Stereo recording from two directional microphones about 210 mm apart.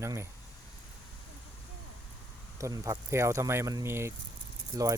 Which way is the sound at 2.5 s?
15° right (ahead or behind).